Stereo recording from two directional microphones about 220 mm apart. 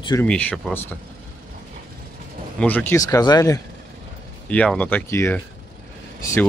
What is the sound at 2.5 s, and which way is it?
Speech, 10° left (ahead or behind).